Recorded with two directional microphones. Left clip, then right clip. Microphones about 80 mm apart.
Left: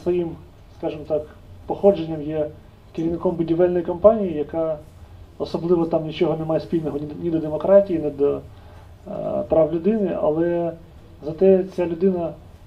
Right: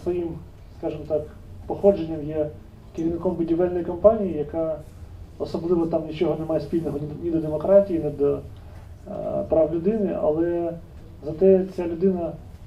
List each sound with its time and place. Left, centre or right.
0.7 s a man's voice: left